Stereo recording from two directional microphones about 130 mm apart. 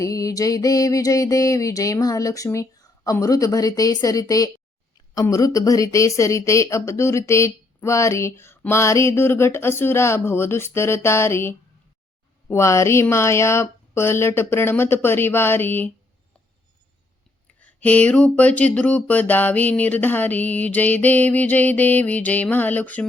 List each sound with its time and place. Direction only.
0.0 s speech: 25° left (ahead or behind)
17.6 s speech: 10° left (ahead or behind)